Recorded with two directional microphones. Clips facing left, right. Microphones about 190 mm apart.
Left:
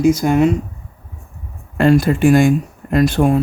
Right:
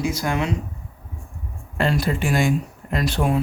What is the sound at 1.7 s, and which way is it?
Speech, 50° left (ahead or behind).